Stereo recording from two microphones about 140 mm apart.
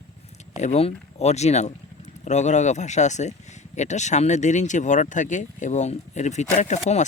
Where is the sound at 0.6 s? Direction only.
50° left (ahead or behind).